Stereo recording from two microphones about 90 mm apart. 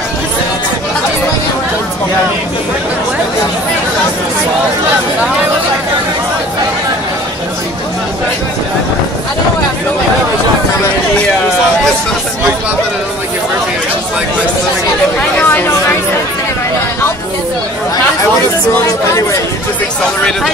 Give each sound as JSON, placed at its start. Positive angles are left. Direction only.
{"t": 15.1, "sound": "chatter", "side_deg": 15}